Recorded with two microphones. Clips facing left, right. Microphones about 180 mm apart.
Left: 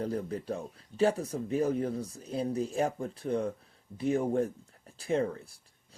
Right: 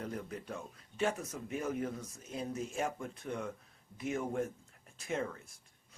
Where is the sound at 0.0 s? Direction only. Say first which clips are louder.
Left 8 dB; 35° left (ahead or behind).